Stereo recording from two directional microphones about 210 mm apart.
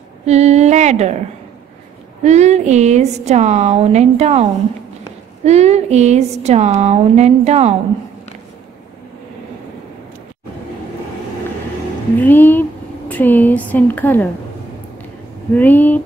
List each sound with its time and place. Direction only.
0.2 s a sound: 30° right (ahead or behind)
2.2 s speech: 30° right (ahead or behind)
12.2 s speech: 10° left (ahead or behind)
15.5 s speech: 5° left (ahead or behind)